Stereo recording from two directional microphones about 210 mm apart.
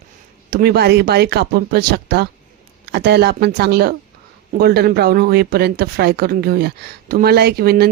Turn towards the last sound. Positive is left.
turn(degrees=-50)  # may be behind; listen again after turning